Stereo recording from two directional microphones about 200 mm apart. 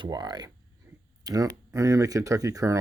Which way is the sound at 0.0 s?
20° right (ahead or behind).